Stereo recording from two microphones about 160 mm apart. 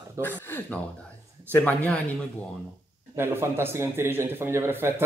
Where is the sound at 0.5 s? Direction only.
15° left (ahead or behind).